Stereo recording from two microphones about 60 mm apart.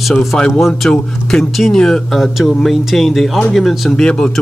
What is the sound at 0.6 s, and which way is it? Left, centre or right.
Speech, centre.